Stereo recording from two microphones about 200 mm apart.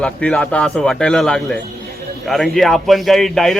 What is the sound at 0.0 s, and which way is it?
Speech, 5° left (ahead or behind).